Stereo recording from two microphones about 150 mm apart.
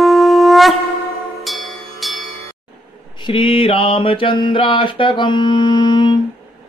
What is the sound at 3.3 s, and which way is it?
Mantra, 35° left (ahead or behind).